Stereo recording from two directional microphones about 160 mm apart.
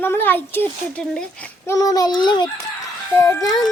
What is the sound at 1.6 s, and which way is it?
A child's voice, 20° left (ahead or behind).